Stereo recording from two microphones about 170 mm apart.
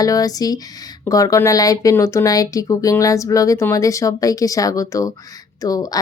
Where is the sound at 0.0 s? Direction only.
20° left (ahead or behind).